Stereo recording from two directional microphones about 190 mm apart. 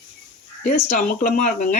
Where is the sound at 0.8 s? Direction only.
45° left (ahead or behind).